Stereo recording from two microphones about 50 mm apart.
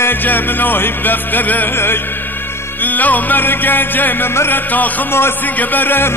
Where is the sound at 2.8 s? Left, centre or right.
Left.